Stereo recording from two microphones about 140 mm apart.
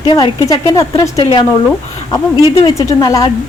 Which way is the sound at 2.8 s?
25° left (ahead or behind).